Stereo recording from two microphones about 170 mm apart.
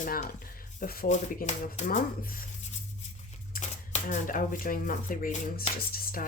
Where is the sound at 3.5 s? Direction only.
45° left (ahead or behind).